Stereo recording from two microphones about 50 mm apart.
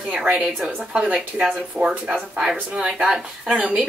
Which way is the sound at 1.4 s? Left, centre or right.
Right.